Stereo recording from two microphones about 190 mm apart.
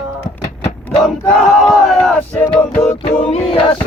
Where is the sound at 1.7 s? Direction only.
Centre (ahead or behind).